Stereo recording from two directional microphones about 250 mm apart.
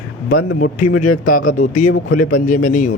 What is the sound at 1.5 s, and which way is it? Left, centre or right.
Speech, left.